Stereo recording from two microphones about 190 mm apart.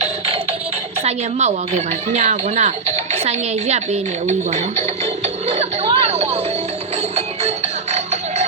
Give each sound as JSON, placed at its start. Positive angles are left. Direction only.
{"t": 1.0, "sound": "speech", "side_deg": -35}
{"t": 7.9, "sound": "music", "side_deg": -35}